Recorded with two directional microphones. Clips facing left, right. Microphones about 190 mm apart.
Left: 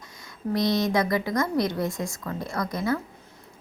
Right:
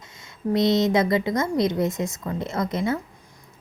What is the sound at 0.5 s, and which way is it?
A woman's voice, 25° right (ahead or behind).